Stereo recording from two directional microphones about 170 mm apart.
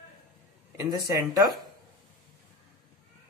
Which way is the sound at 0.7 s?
20° right (ahead or behind).